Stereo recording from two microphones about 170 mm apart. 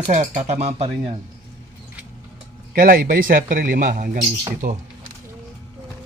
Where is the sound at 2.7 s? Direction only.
55° right (ahead or behind).